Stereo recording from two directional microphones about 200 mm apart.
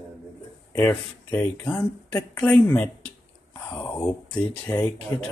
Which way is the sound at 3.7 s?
10° left (ahead or behind).